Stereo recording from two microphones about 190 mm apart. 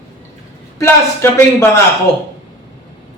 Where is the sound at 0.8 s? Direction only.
15° left (ahead or behind).